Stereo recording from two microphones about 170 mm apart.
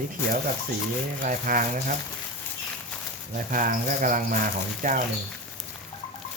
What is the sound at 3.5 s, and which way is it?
Speech, 55° right (ahead or behind).